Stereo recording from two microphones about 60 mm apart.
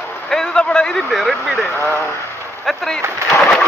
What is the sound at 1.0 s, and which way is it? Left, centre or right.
Speech, centre.